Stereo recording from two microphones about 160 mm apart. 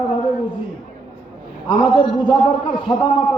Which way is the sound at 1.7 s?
30° left (ahead or behind).